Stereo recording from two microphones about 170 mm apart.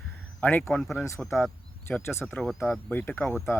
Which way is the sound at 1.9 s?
15° left (ahead or behind).